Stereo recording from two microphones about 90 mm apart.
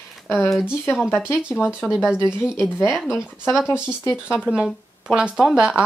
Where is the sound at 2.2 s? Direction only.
30° left (ahead or behind).